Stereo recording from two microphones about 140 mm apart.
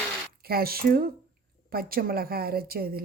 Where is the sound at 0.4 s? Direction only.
90° right.